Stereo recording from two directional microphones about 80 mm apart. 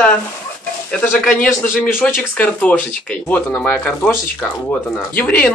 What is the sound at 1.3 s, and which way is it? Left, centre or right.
A man's voice, centre.